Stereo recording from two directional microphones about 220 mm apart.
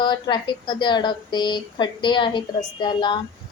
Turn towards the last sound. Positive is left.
turn(degrees=20)  # may be behind; listen again after turning